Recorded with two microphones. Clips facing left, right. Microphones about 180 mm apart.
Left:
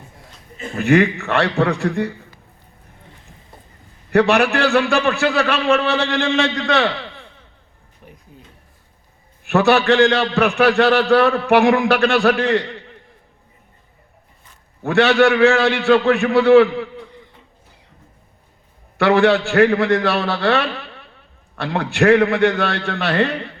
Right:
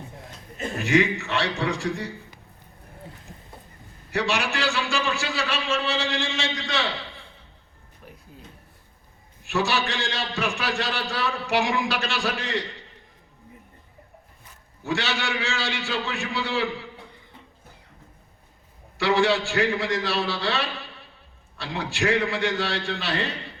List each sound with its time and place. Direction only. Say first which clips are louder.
0.8 s a man's voice: left 7 dB; 60° left (ahead or behind)
4.1 s a man's voice: left 11 dB; 60° left (ahead or behind)
8.0 s a sound: left 2 dB; 5° left (ahead or behind)
9.4 s a man's voice: left 10 dB; 60° left (ahead or behind)
14.8 s a man's voice: left 14 dB; 60° left (ahead or behind)
18.9 s a man's voice: left 7 dB; 60° left (ahead or behind)